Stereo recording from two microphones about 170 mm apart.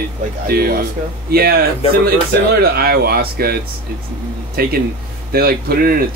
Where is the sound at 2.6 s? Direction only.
65° right (ahead or behind).